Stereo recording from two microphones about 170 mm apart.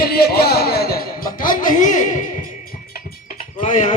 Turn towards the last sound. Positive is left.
turn(degrees=45)  # may be behind; listen again after turning